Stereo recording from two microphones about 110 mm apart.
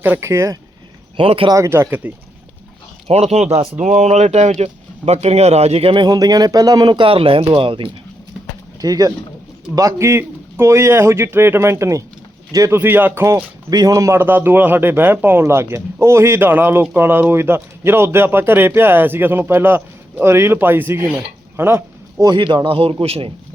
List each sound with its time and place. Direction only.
0.0 s speech: 20° right (ahead or behind)
1.1 s a man's voice: 55° right (ahead or behind)
1.5 s speech: 30° right (ahead or behind)
3.1 s speech: 75° right (ahead or behind)
5.9 s speech: 40° right (ahead or behind)
8.8 s speech: 35° right (ahead or behind); by 13.3 s 20° right (ahead or behind)
13.3 s speech: 35° right (ahead or behind); by 21.8 s 20° right (ahead or behind)
22.2 s speech: 40° right (ahead or behind)
22.4 s a man's voice: 55° right (ahead or behind)